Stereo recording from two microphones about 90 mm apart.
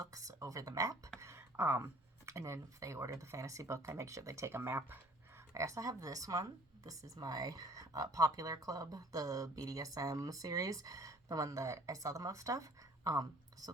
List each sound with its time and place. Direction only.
0.0 s speech: 40° right (ahead or behind)
5.5 s speech: 35° right (ahead or behind)